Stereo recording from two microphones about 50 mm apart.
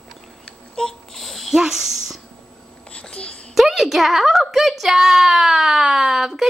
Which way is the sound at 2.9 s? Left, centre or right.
Left.